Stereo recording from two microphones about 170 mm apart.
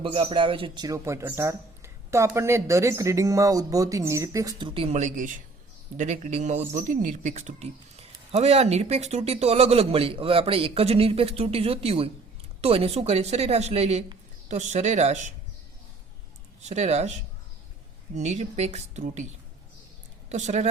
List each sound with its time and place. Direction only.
0.0 s speech: 35° right (ahead or behind)
16.6 s speech: 40° right (ahead or behind)
20.3 s speech: 45° right (ahead or behind)